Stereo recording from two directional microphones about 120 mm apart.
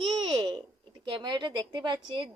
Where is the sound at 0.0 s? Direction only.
45° right (ahead or behind).